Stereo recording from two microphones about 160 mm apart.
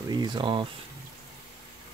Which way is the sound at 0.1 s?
25° right (ahead or behind).